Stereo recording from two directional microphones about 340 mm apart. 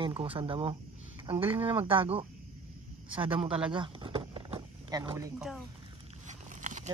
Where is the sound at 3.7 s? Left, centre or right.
Centre.